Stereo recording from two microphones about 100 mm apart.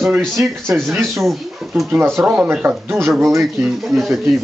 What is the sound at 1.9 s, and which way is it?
Speech, 20° right (ahead or behind).